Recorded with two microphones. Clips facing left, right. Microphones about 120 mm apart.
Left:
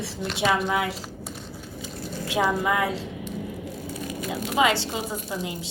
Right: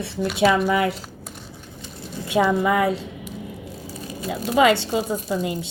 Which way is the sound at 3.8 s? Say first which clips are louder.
Right 2 dB; 30° right (ahead or behind).